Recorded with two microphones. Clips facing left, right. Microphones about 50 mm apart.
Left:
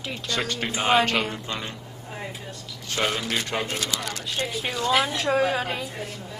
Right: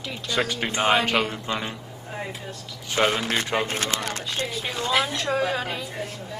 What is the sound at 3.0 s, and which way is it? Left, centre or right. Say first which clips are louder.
Speech: right 4 dB; right.